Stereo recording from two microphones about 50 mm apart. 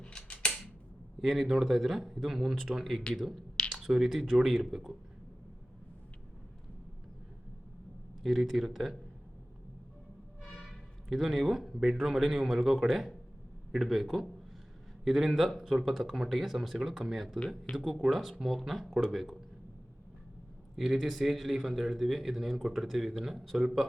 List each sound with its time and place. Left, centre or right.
0.0 s scissors: centre
1.2 s speech: centre
8.2 s speech: centre
11.1 s speech: centre
20.7 s speech: centre